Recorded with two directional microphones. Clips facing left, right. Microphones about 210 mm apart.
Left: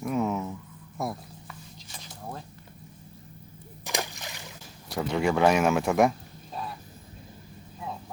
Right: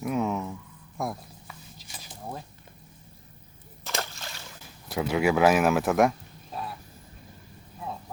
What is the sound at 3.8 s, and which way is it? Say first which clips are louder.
Slosh: left 1 dB; 15° left (ahead or behind).